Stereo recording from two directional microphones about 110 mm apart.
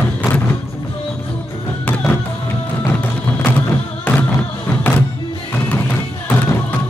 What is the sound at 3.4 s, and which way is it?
Music, 15° left (ahead or behind).